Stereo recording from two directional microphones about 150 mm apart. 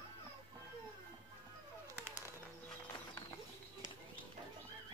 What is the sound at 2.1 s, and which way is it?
Bird, 15° right (ahead or behind).